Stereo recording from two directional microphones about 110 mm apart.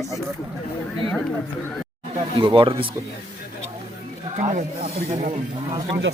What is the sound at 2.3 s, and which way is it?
Speech, 50° right (ahead or behind).